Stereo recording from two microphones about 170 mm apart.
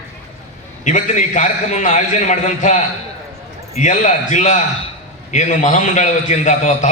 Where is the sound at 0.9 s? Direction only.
45° left (ahead or behind).